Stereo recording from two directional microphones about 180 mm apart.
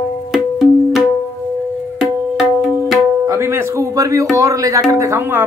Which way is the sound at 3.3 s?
15° right (ahead or behind).